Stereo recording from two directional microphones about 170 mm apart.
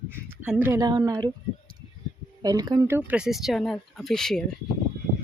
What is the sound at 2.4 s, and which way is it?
Speech, 20° right (ahead or behind).